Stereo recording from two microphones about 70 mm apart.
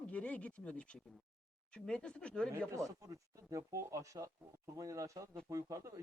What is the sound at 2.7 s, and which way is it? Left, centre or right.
Speech, right.